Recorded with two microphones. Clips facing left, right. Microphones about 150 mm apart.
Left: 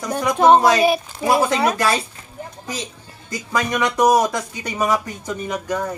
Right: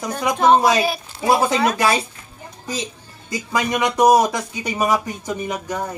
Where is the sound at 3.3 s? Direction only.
20° right (ahead or behind).